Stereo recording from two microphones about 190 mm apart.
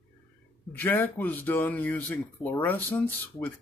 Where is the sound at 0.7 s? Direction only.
10° left (ahead or behind).